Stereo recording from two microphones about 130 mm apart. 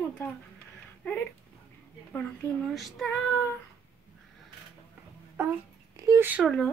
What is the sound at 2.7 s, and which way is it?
Child singing, centre (ahead or behind).